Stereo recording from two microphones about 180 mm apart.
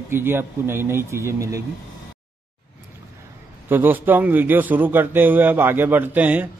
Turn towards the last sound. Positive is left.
turn(degrees=-10)  # may be behind; listen again after turning